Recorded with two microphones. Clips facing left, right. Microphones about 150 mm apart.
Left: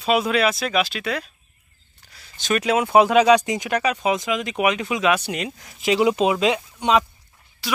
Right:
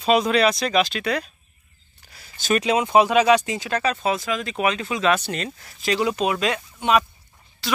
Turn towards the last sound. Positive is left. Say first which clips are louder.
# right 1 dB
turn(degrees=10)  # may be behind; listen again after turning